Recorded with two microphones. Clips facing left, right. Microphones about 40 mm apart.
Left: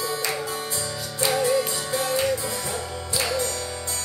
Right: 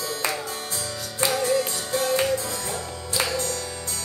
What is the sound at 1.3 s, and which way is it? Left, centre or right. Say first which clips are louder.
Music: left 2 dB; centre.